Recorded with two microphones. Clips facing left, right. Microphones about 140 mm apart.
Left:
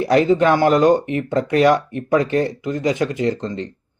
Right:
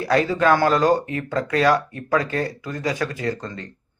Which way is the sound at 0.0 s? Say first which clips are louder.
Left 4 dB; 20° left (ahead or behind).